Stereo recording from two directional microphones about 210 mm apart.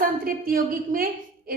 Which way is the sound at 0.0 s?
40° right (ahead or behind).